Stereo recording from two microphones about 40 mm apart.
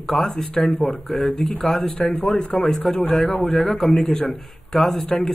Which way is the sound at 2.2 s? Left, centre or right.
Left.